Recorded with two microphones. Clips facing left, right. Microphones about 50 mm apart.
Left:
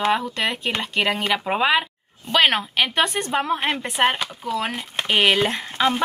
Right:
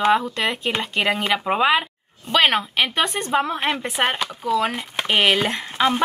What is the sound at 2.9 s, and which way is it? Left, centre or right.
Speech, left.